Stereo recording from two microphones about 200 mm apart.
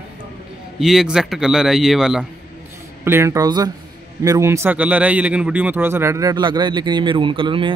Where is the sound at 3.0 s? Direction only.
15° right (ahead or behind).